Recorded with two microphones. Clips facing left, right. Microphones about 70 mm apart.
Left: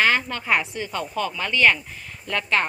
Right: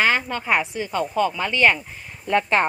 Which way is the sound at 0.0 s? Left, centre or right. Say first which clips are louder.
Right 1 dB; centre.